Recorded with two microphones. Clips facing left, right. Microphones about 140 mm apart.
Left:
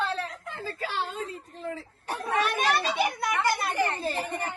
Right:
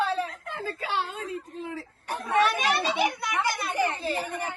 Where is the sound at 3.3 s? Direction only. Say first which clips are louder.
Left 1 dB; 15° right (ahead or behind).